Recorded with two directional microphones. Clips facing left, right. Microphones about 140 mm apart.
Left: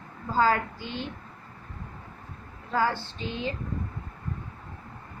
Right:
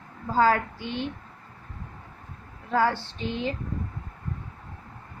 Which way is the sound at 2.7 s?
60° right (ahead or behind).